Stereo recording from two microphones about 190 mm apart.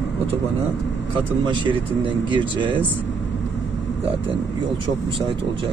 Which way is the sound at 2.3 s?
25° right (ahead or behind).